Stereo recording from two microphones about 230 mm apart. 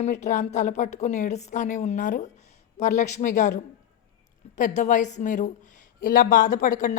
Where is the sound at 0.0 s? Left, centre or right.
Left.